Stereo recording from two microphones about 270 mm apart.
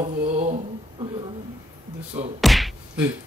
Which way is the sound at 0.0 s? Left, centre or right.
Right.